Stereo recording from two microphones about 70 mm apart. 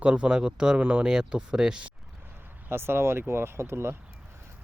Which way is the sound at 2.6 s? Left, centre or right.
Right.